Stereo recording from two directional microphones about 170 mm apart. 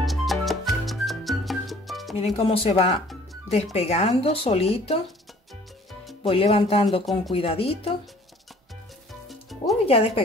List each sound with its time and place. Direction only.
0.0 s music: centre (ahead or behind)
2.3 s speech: 35° left (ahead or behind)
6.2 s speech: 35° left (ahead or behind)
9.3 s music: centre (ahead or behind)
9.8 s speech: 35° left (ahead or behind)